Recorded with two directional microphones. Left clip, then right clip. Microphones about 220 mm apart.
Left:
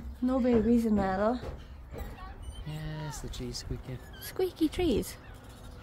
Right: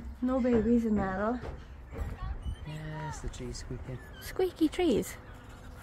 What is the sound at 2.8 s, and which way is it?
Speech, 35° left (ahead or behind).